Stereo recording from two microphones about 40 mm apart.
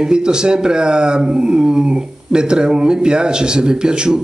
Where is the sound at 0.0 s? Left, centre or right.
Centre.